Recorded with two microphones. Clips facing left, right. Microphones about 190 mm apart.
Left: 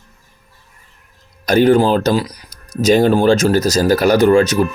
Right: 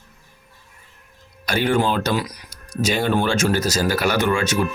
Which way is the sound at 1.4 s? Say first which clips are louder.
Left 8 dB; 40° left (ahead or behind).